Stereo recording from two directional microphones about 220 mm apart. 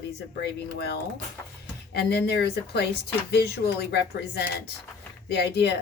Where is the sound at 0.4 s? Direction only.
50° left (ahead or behind).